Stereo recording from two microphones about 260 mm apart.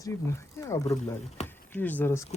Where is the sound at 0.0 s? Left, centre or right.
Centre.